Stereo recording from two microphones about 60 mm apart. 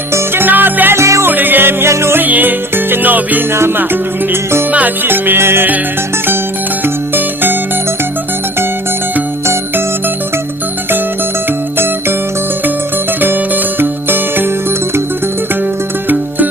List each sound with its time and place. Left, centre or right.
0.1 s music: right
0.9 s music: right
1.2 s music: right
1.9 s music: right
2.2 s music: right
4.7 s music: right
13.2 s music: right